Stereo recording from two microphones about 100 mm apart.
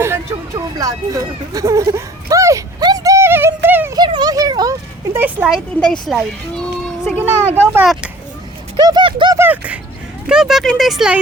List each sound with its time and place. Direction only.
0.0 s hubbub: 25° right (ahead or behind)
2.8 s a sound: 40° right (ahead or behind); by 3.9 s 20° right (ahead or behind)
3.9 s a sound: 45° right (ahead or behind)
5.1 s a sound: 15° right (ahead or behind)
5.8 s speech: 5° left (ahead or behind)
7.2 s speech: 20° right (ahead or behind)
8.8 s speech: 40° right (ahead or behind)
9.0 s speech: 55° right (ahead or behind)
9.4 s speech: 15° right (ahead or behind)